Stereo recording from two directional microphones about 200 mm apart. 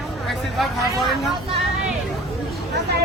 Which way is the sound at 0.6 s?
Centre (ahead or behind).